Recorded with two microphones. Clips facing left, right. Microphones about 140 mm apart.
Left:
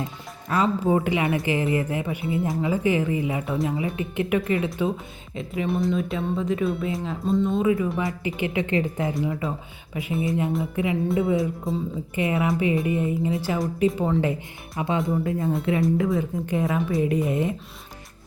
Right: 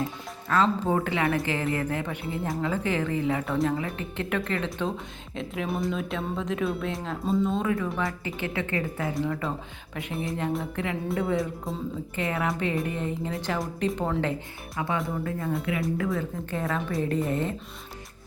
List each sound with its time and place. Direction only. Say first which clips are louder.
0.5 s speech: left 2 dB; 10° left (ahead or behind)
8.2 s a woman's voice: left 5 dB; 15° left (ahead or behind)
12.1 s speech: left 6 dB; 10° left (ahead or behind)
14.8 s a woman's voice: left 5 dB; 20° left (ahead or behind)